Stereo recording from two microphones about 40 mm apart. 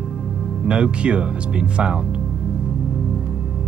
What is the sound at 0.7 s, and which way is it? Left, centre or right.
Speech, right.